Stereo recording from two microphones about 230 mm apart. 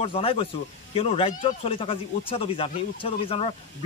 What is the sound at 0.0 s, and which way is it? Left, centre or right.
Speech, left.